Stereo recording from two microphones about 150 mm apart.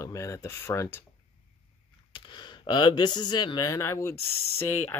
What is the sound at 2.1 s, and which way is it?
Speech, 30° left (ahead or behind).